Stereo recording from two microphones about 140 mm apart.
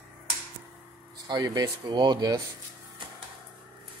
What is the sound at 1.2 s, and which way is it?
Speech, 30° right (ahead or behind).